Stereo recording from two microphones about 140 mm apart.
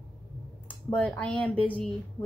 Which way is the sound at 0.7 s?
10° left (ahead or behind).